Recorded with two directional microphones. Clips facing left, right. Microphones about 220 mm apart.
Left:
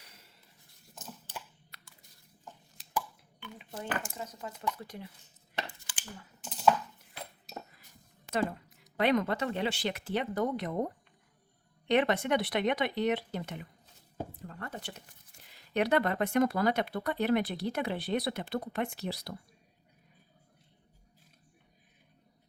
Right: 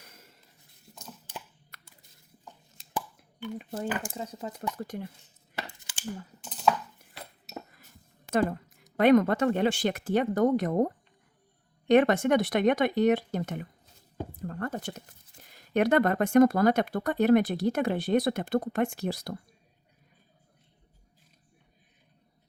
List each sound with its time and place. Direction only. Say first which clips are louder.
0.0 s writing: right 5 dB; 45° right (ahead or behind)
1.7 s a sound: right 4 dB; 50° right (ahead or behind)
3.4 s speech: right 11 dB; 45° right (ahead or behind)
3.8 s speech: right 3 dB; 30° right (ahead or behind)
4.8 s speech: right 8 dB; 50° right (ahead or behind)
6.4 s a sound: even; centre (ahead or behind)
8.3 s speech: right 5 dB; 50° right (ahead or behind)